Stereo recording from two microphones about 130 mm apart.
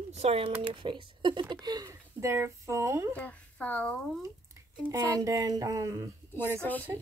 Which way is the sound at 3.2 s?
10° left (ahead or behind).